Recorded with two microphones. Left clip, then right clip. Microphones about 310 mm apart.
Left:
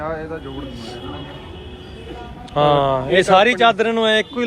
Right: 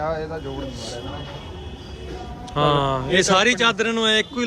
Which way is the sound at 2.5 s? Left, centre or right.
Centre.